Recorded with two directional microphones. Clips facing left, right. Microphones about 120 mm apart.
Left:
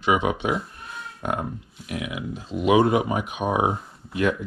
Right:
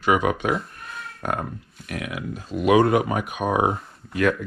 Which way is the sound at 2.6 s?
15° left (ahead or behind).